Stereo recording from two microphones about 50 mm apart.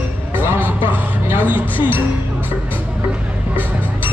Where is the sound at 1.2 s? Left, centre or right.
Right.